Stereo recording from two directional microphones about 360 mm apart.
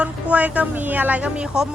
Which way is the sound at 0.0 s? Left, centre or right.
Centre.